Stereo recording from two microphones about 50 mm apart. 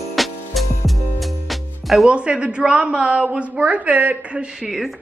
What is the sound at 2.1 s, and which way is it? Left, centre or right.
A woman's voice, right.